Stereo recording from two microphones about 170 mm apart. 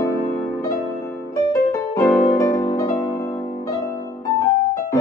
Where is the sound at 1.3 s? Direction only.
20° left (ahead or behind).